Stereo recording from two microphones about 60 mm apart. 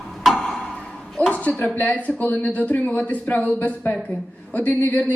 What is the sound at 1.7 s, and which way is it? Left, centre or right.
Speech, left.